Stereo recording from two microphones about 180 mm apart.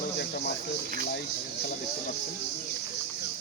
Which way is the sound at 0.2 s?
65° left (ahead or behind).